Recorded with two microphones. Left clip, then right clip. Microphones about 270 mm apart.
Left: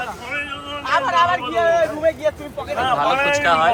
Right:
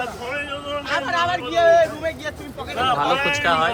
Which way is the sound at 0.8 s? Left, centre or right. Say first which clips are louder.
Left 6 dB; centre.